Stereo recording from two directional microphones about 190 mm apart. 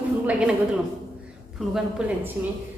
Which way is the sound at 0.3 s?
5° right (ahead or behind).